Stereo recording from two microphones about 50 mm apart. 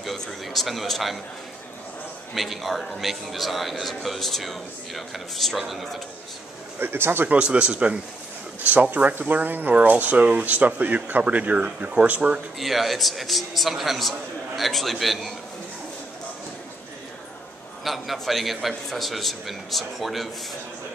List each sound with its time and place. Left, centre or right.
0.0 s a man's voice: centre
2.3 s a man's voice: centre
6.8 s speech: right
7.2 s speech: right
8.6 s speech: right
12.5 s a man's voice: centre
17.8 s a man's voice: centre